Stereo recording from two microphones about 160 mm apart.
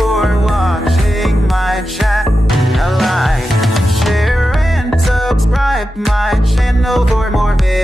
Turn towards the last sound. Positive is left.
turn(degrees=0)  # may be behind; listen again after turning